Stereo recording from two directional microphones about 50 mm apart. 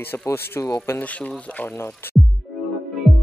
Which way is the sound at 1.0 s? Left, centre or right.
Left.